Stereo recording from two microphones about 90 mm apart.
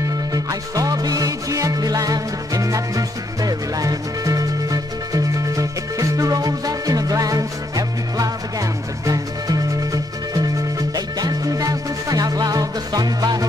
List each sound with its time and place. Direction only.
0.3 s music: 40° right (ahead or behind)
11.0 s music: 45° right (ahead or behind)